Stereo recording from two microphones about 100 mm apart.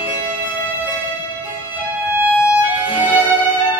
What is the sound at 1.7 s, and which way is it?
Music, 15° right (ahead or behind).